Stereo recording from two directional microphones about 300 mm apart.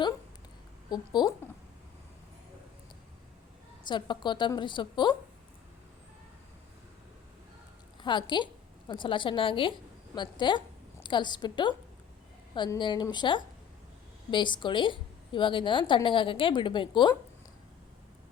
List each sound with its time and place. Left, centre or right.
0.9 s a woman's voice: centre
3.8 s a woman's voice: centre
8.0 s a woman's voice: centre